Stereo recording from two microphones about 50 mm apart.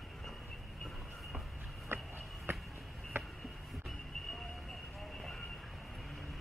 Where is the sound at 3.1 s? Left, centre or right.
Right.